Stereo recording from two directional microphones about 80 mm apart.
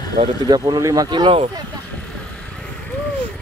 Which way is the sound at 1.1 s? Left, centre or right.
Right.